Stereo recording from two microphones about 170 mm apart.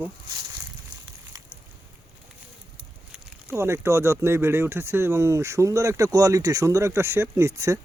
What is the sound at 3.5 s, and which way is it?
Speech, 15° right (ahead or behind).